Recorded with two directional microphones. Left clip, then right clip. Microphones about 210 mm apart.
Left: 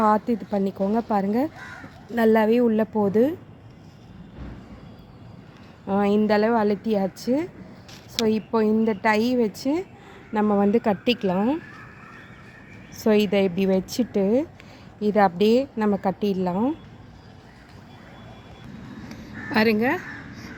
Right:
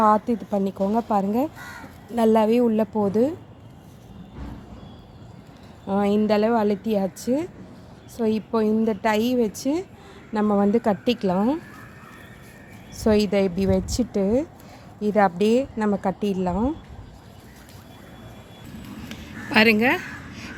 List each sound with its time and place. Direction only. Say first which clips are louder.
0.0 s a woman's voice: right 2 dB; centre (ahead or behind)
5.9 s a woman's voice: even; centre (ahead or behind)
11.0 s speech: even; 40° right (ahead or behind)
11.3 s speech: right 1 dB; 10° right (ahead or behind)
13.0 s a woman's voice: even; centre (ahead or behind)
19.0 s a sound: even; centre (ahead or behind)